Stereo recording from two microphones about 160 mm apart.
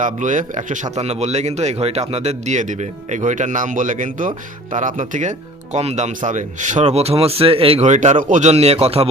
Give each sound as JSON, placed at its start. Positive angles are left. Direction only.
{"t": 0.0, "sound": "speech", "side_deg": -55}